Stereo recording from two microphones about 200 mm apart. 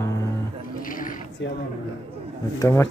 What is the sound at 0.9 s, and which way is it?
Mechanisms, 45° left (ahead or behind).